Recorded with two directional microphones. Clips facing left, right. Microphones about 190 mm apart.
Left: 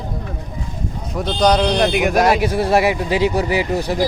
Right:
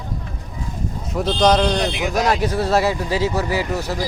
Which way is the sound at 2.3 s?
10° left (ahead or behind).